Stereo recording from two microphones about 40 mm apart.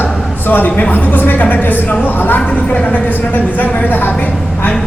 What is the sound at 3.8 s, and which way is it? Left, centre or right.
Speech, left.